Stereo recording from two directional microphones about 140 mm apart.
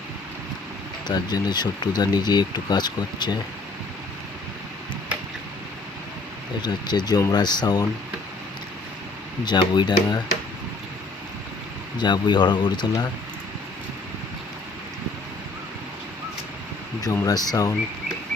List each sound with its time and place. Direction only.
1.0 s speech: 30° left (ahead or behind)
6.6 s speech: 30° left (ahead or behind)
9.4 s speech: 30° left (ahead or behind)
11.9 s speech: 30° left (ahead or behind)
17.0 s speech: 25° left (ahead or behind)